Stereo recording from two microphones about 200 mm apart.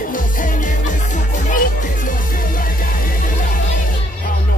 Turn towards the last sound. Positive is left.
turn(degrees=45)  # may be behind; listen again after turning